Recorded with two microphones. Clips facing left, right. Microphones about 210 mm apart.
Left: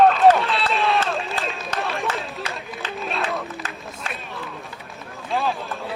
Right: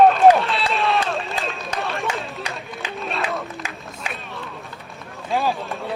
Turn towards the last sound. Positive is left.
turn(degrees=0)  # may be behind; listen again after turning